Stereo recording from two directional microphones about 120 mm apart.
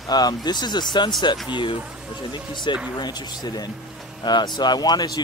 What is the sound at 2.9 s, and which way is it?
Speech, 35° left (ahead or behind).